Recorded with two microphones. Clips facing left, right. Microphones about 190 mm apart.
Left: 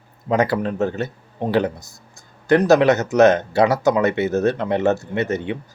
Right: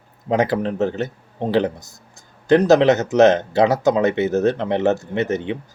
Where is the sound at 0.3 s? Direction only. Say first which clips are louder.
Even; 20° right (ahead or behind).